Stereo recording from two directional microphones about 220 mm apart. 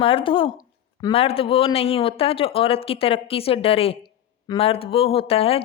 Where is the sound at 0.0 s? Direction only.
25° left (ahead or behind).